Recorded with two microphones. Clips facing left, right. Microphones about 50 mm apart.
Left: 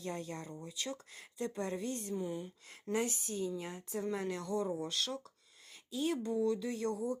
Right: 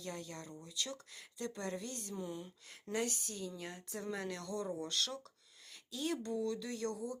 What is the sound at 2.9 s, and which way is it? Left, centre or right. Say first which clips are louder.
Speech: left 3 dB; left.